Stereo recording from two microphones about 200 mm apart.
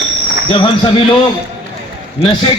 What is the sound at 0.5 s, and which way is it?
Speech, 25° left (ahead or behind).